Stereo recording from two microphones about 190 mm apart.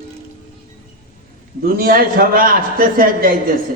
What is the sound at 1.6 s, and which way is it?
A man's voice, 50° right (ahead or behind).